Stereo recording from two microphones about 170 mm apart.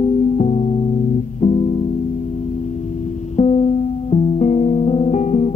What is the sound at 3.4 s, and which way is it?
Music, 40° left (ahead or behind).